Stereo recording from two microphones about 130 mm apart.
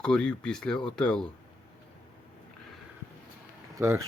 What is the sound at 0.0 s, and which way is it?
Speech, 5° left (ahead or behind).